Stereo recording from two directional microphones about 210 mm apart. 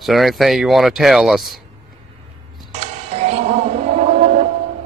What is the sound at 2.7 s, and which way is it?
Music, 30° right (ahead or behind).